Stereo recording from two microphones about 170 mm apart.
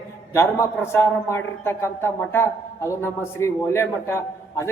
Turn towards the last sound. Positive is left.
turn(degrees=15)  # may be behind; listen again after turning